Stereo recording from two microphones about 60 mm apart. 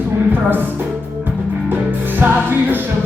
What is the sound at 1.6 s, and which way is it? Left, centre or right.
Music, right.